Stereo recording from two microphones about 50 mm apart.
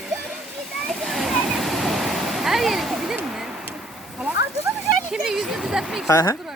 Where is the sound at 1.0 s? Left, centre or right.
Centre.